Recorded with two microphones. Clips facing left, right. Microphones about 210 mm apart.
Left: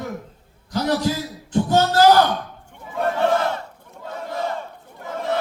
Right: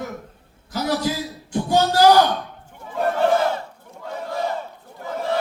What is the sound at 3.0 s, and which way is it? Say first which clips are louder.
Battle cry: right 1 dB; 5° right (ahead or behind).